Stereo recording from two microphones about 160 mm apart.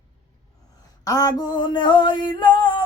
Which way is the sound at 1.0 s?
25° left (ahead or behind).